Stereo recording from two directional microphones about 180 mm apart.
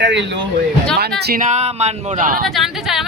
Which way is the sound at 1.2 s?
55° right (ahead or behind).